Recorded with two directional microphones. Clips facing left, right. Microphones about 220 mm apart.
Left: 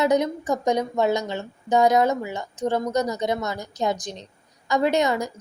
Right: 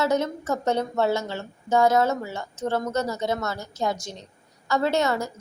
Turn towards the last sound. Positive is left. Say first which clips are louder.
# left 2 dB
turn(degrees=15)  # may be behind; listen again after turning